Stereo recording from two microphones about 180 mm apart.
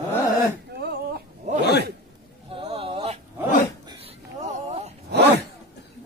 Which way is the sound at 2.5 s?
30° right (ahead or behind).